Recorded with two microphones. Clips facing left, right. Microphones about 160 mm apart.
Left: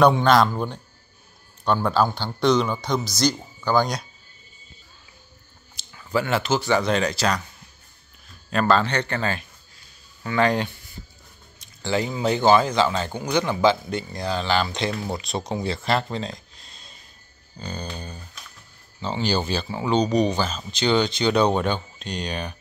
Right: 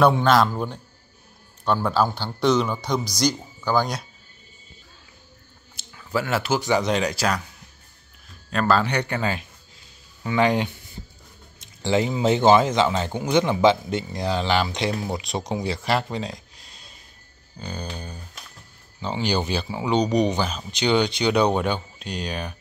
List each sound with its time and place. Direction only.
0.0 s a man's voice: 5° right (ahead or behind)
5.8 s speech: 5° right (ahead or behind)
8.5 s speech: centre (ahead or behind)